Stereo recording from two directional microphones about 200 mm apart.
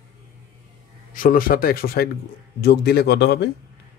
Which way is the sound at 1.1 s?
45° left (ahead or behind).